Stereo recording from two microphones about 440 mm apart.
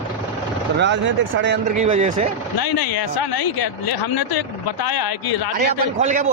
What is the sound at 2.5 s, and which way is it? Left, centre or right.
Speech, left.